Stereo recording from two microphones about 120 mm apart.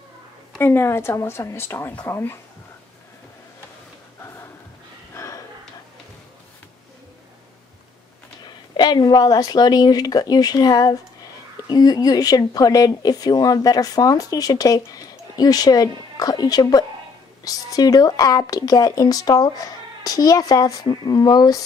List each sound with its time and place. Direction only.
0.6 s speech: 20° left (ahead or behind)
5.1 s a sound: 25° left (ahead or behind)
8.5 s speech: 40° left (ahead or behind)